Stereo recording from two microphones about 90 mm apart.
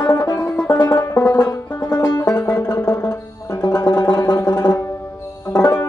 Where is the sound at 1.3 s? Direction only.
45° left (ahead or behind).